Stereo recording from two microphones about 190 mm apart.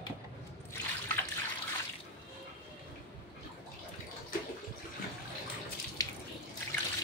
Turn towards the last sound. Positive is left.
turn(degrees=15)  # may be behind; listen again after turning